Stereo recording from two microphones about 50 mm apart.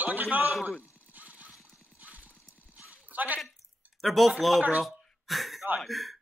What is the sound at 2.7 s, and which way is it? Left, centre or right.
Clip-clop, right.